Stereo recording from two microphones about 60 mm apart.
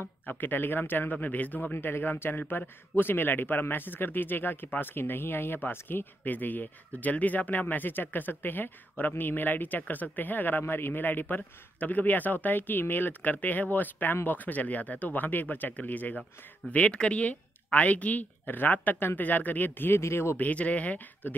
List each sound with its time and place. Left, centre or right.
0.3 s a man's voice: left
20.0 s speech: left
20.3 s a man's voice: left